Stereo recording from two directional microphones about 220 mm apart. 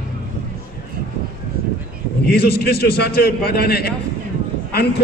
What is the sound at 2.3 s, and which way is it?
A man's voice, 45° left (ahead or behind).